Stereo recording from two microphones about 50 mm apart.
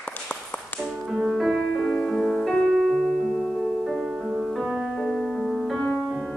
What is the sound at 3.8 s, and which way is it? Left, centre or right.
Music, centre.